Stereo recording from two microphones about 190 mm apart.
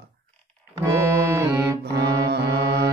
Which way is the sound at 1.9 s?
60° right (ahead or behind).